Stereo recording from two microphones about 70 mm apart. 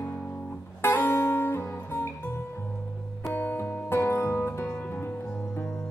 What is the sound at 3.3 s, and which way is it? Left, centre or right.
Music, left.